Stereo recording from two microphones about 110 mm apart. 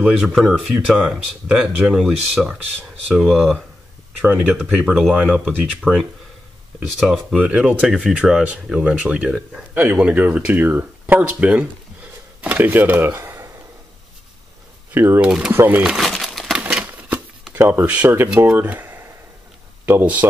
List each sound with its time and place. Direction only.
0.0 s speech: 5° right (ahead or behind); by 13.5 s 25° right (ahead or behind)
15.0 s speech: 20° right (ahead or behind)
15.2 s speech: 10° right (ahead or behind)
15.8 s crumpling: 5° right (ahead or behind)
16.6 s typewriter: 15° right (ahead or behind)
17.6 s speech: 20° right (ahead or behind)